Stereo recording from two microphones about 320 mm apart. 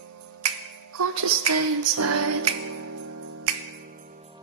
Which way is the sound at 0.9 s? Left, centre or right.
Right.